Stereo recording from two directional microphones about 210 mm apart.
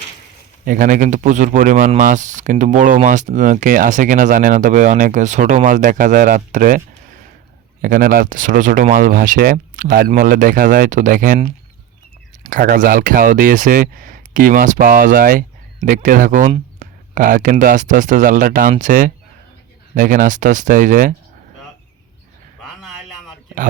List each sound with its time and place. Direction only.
0.6 s speech: 40° right (ahead or behind)
12.4 s speech: 40° right (ahead or behind)